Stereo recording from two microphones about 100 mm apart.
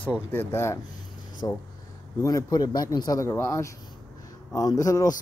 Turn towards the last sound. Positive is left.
turn(degrees=35)  # may be behind; listen again after turning